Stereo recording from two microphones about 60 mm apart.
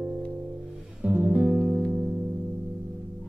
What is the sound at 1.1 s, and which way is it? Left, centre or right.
Music, right.